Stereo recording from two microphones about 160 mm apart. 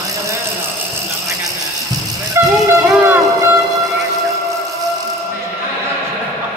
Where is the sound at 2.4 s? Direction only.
15° right (ahead or behind).